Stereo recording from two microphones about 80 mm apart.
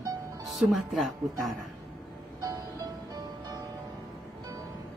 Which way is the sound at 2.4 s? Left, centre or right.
Right.